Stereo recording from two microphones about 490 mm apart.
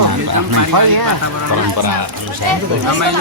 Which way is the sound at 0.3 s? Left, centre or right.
Right.